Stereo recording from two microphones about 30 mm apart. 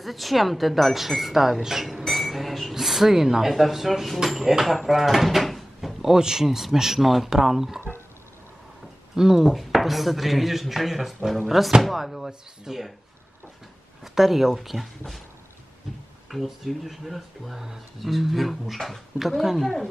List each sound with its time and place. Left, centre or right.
0.0 s speech: centre
2.0 s a sound: centre
2.7 s speech: centre
3.5 s speech: centre
6.0 s speech: centre
9.1 s speech: centre
9.5 s speech: centre
14.0 s speech: centre
16.3 s speech: centre